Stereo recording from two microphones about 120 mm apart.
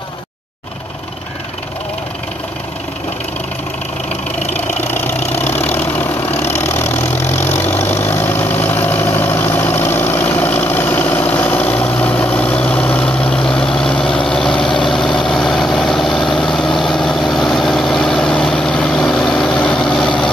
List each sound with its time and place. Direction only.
4.6 s vehicle: 15° left (ahead or behind)
6.4 s engine: 20° left (ahead or behind)
7.4 s vehicle: 20° left (ahead or behind)